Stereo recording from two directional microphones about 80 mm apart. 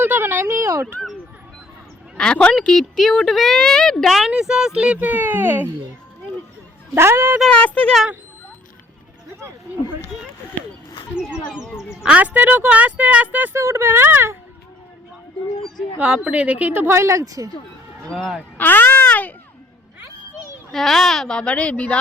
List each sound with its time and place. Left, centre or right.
0.0 s a sound: right
2.1 s speech: centre
4.3 s a woman's voice: centre; by 5.7 s right
6.9 s speech: right
7.5 s speech: centre
11.2 s a woman's voice: centre
13.6 s speech: right
16.0 s a woman's voice: centre; by 17.5 s right
18.1 s speech: centre
18.5 s speech: left
20.7 s speech: centre